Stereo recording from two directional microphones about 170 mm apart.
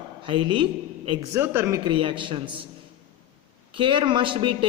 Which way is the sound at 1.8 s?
30° right (ahead or behind).